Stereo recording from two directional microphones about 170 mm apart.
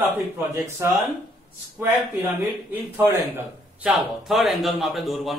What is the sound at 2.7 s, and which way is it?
A man's voice, 10° right (ahead or behind).